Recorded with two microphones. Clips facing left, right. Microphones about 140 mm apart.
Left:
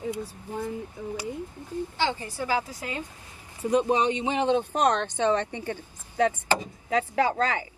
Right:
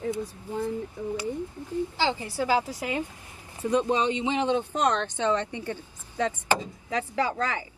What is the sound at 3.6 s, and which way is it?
Speech, 15° left (ahead or behind).